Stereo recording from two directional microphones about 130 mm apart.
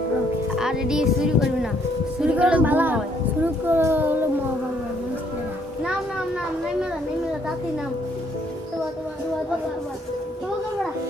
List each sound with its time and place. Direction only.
0.6 s speech: 5° right (ahead or behind)